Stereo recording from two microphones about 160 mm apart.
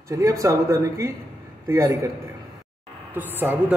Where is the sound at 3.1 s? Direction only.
10° right (ahead or behind).